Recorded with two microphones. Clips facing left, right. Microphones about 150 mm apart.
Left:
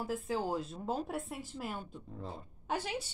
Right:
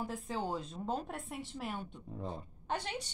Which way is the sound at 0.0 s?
Centre (ahead or behind).